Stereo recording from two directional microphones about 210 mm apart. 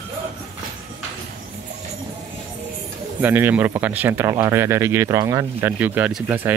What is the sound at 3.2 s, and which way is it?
Speech, 10° right (ahead or behind).